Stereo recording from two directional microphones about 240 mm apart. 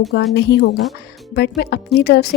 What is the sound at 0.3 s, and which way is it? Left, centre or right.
Speech, left.